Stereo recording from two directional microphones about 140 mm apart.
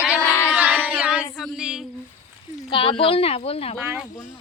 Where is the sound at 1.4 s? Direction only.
5° right (ahead or behind).